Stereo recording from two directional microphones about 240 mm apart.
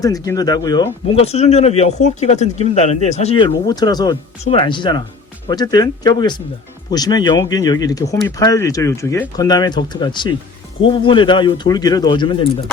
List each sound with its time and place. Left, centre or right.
0.0 s speech: centre